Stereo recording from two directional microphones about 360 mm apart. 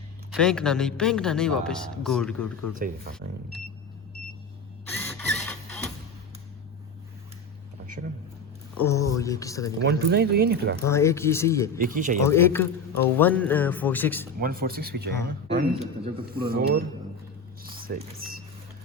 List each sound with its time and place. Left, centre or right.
0.3 s a man's voice: centre
4.9 s printer: centre
8.0 s a sound: right
8.8 s speech: centre
9.8 s speech: right
10.8 s speech: centre
11.8 s speech: right
12.2 s a man's voice: centre
14.3 s speech: right
17.6 s a sound: right